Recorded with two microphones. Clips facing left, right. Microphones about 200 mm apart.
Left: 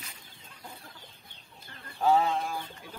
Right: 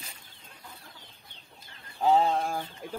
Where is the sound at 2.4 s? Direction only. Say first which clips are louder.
Right 3 dB; 50° right (ahead or behind).